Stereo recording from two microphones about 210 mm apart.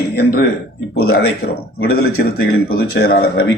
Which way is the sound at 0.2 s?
50° left (ahead or behind).